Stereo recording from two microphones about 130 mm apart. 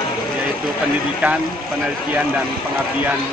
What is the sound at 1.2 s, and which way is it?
Speech, 15° right (ahead or behind).